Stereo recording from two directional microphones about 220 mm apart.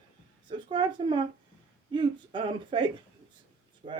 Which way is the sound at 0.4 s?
20° right (ahead or behind).